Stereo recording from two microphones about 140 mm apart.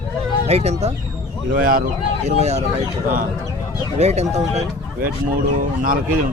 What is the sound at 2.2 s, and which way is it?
Speech, 50° right (ahead or behind).